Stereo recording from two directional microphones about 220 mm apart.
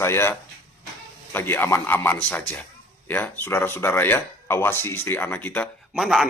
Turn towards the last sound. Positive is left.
turn(degrees=0)  # may be behind; listen again after turning